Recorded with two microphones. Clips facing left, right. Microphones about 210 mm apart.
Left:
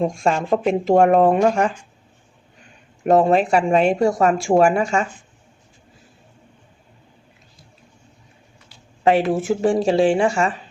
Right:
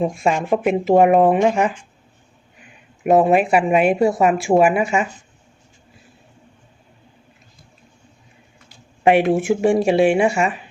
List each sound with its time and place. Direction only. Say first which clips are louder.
0.0 s speech: right 1 dB; 5° right (ahead or behind)
2.6 s a sound: right 1 dB; 10° right (ahead or behind)
3.8 s speech: right 1 dB; 5° right (ahead or behind)
9.0 s speech: right 2 dB; 15° right (ahead or behind)